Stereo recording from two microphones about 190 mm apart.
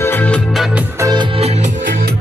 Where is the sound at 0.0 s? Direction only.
10° left (ahead or behind).